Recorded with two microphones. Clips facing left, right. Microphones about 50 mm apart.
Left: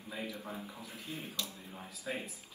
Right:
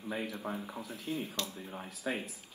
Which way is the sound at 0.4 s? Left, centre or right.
Right.